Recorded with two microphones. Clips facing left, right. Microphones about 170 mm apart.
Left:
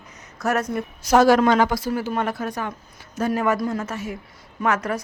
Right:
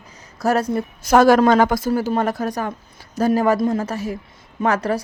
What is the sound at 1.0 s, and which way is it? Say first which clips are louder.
A woman's voice: right 3 dB; 55° right (ahead or behind).